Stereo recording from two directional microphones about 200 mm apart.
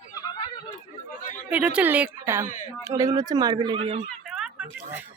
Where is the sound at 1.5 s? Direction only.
5° right (ahead or behind); by 4.0 s 30° right (ahead or behind).